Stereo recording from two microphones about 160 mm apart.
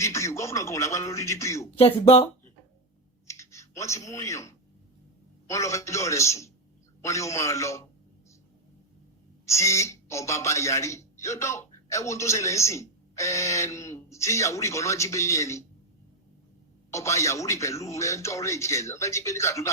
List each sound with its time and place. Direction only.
0.0 s speech: 20° left (ahead or behind)
1.8 s speech: 35° left (ahead or behind)
3.2 s typing: 20° left (ahead or behind)
5.5 s speech: 20° left (ahead or behind)
9.5 s speech: 20° left (ahead or behind)
16.9 s speech: 20° left (ahead or behind)